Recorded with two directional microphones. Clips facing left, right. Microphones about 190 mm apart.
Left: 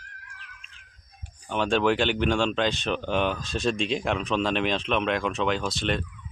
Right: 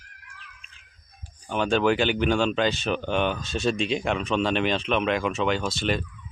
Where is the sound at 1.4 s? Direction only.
Centre (ahead or behind).